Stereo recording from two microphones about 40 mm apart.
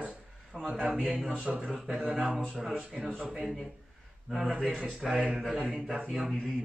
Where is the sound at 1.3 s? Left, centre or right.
Right.